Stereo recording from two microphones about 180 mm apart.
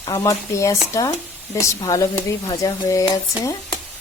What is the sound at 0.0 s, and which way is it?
Speech, 20° left (ahead or behind).